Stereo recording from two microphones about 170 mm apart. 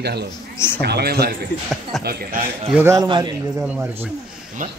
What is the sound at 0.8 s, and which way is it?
Speech, 70° right (ahead or behind).